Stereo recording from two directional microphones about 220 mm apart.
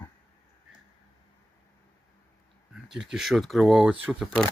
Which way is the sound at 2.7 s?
Centre (ahead or behind).